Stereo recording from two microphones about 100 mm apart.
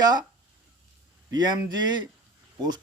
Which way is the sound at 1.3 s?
45° right (ahead or behind).